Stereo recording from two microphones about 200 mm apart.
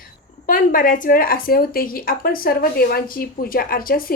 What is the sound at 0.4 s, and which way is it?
Speech, 45° left (ahead or behind).